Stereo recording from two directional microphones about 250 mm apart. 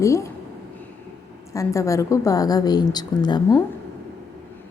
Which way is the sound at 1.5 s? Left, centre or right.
Centre.